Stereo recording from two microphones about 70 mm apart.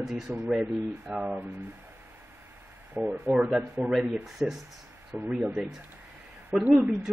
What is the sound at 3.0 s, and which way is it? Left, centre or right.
Speech, right.